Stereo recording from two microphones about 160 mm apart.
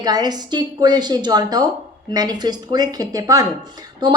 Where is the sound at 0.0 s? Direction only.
25° right (ahead or behind).